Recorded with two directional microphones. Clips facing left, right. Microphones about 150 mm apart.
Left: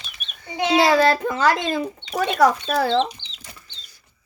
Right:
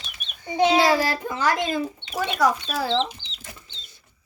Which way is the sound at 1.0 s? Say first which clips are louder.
Left 6 dB; 90° left.